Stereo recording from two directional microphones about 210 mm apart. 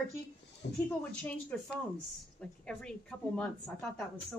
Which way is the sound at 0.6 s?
50° left (ahead or behind).